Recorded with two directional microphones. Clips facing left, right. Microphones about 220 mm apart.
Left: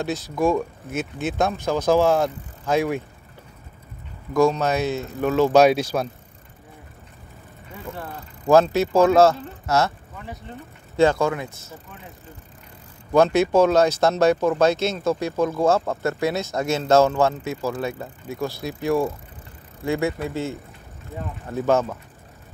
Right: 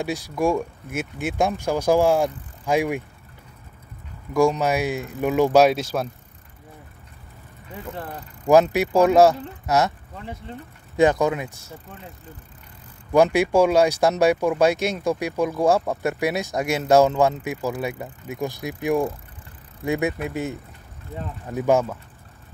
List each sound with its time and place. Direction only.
0.0 s speech: 10° right (ahead or behind)
4.3 s speech: 10° right (ahead or behind)
8.7 s speech: 15° right (ahead or behind)
13.1 s speech: 10° right (ahead or behind)